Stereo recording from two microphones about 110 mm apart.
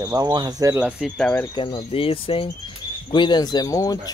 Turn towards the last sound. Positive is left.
turn(degrees=35)  # may be behind; listen again after turning